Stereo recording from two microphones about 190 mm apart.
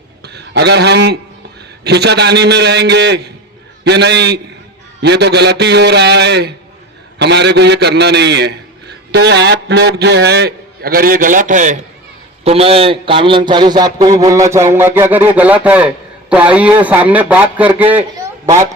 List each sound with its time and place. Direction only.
0.3 s a man's voice: 60° right (ahead or behind); by 18.7 s 15° right (ahead or behind)